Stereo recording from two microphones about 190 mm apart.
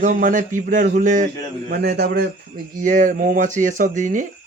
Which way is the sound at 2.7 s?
45° right (ahead or behind).